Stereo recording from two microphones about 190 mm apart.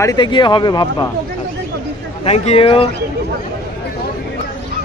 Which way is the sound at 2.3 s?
30° left (ahead or behind).